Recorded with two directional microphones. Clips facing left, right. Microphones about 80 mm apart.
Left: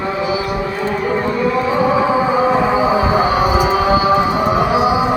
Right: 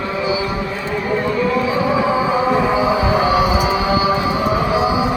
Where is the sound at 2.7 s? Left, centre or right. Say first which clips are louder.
Left 2 dB; left.